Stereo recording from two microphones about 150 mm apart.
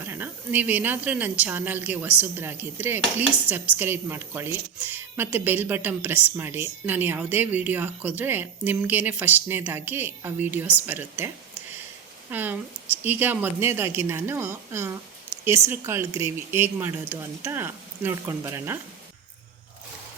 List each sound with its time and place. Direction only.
0.0 s speech: 15° right (ahead or behind)
12.3 s speech: 10° right (ahead or behind)